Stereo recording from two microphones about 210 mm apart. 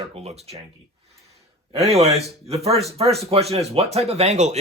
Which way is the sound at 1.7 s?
30° right (ahead or behind).